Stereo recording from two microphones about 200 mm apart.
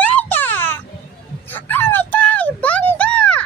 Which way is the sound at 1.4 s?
10° left (ahead or behind).